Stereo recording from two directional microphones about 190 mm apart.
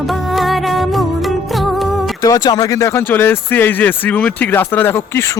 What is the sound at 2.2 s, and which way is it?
Speech, 20° left (ahead or behind).